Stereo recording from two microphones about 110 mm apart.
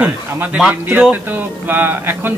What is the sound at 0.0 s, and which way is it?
Speech, 15° right (ahead or behind).